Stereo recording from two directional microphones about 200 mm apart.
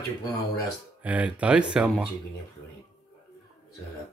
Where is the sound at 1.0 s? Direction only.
5° right (ahead or behind).